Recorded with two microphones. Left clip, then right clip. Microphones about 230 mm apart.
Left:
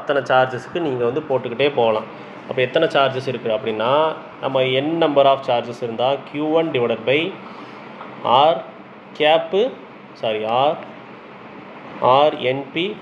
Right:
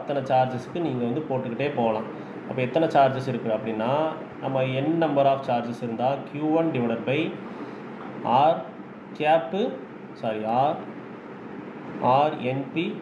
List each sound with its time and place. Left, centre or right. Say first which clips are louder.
0.0 s speech: left 6 dB; left
8.3 s speech: left 6 dB; left
12.1 s speech: left 7 dB; left